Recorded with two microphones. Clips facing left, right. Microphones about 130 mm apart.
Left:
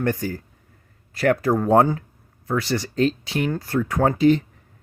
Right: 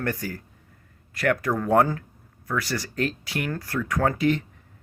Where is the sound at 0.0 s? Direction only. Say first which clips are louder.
Left 5 dB; 25° left (ahead or behind).